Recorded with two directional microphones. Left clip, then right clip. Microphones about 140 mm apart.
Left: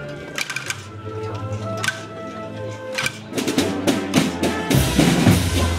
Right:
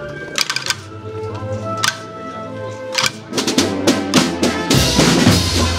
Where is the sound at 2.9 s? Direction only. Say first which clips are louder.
Right 6 dB; 35° right (ahead or behind).